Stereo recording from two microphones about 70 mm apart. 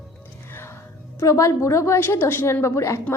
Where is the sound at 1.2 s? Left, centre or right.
Left.